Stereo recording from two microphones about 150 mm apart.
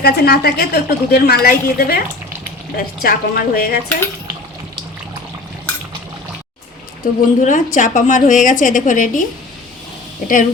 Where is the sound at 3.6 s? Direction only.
80° left.